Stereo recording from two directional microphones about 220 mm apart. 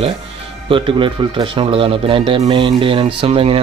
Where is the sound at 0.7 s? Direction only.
20° right (ahead or behind).